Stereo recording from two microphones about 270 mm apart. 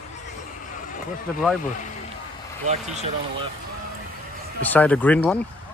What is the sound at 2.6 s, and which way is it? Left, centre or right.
Speech, right.